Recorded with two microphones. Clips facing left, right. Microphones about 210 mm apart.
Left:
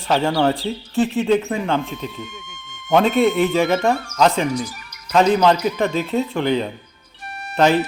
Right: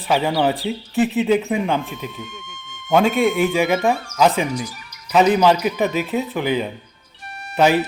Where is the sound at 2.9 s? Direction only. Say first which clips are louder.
Even; centre (ahead or behind).